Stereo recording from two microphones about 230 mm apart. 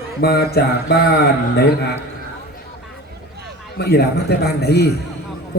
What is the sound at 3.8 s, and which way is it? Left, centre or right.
Speech, left.